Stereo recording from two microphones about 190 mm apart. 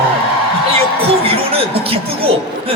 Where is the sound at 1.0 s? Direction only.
30° right (ahead or behind).